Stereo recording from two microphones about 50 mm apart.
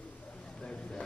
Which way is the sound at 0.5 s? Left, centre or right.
Centre.